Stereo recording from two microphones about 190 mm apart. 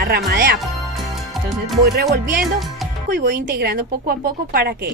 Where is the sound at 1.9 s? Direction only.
55° right (ahead or behind).